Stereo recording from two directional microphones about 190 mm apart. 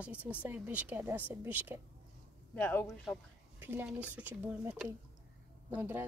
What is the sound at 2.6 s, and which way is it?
Speech, 10° left (ahead or behind).